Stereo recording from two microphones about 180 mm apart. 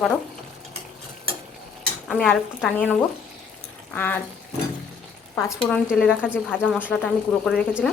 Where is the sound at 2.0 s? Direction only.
5° left (ahead or behind).